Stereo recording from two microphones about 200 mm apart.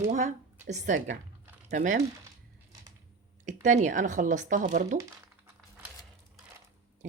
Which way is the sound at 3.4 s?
40° right (ahead or behind).